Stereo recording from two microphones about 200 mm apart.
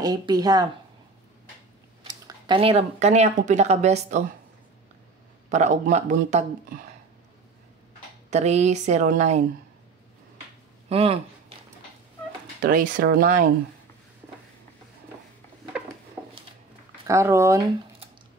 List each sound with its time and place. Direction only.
0.0 s a woman's voice: 20° right (ahead or behind)
2.0 s speech: 20° right (ahead or behind); by 4.3 s 35° right (ahead or behind)
5.5 s speech: 35° right (ahead or behind)
8.3 s speech: 35° right (ahead or behind)
10.9 s speech: 30° right (ahead or behind)
12.6 s speech: 45° right (ahead or behind)
17.1 s speech: 15° right (ahead or behind)